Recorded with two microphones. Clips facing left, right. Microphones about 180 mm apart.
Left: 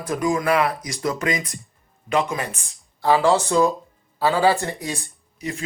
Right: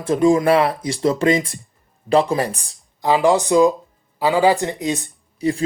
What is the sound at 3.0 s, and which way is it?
Speech, 15° right (ahead or behind).